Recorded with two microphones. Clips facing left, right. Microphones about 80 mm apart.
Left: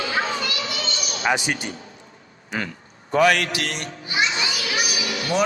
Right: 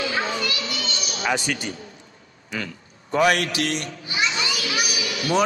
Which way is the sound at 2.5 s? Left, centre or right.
Left.